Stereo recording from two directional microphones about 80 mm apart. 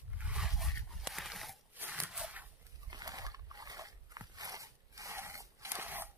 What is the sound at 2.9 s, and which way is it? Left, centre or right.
Dog, right.